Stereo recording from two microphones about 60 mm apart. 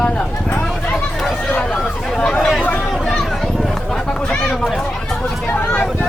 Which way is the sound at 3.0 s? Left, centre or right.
Centre.